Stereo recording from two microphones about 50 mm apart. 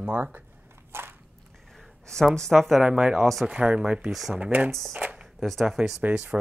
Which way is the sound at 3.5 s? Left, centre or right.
Right.